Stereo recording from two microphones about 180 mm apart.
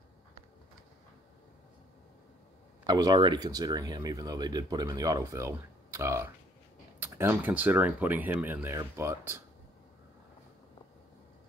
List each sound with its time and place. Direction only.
2.9 s speech: 20° right (ahead or behind)